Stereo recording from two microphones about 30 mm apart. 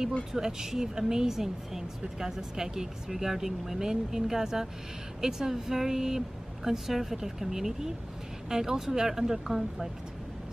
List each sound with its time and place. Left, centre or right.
0.3 s speech: centre